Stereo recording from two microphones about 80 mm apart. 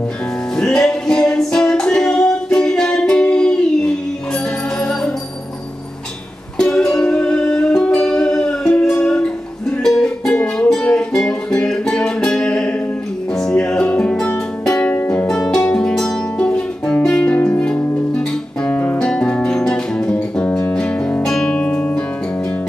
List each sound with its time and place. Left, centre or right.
0.6 s music: centre
6.6 s music: centre
10.3 s music: centre
18.6 s guitar: left
18.9 s music: centre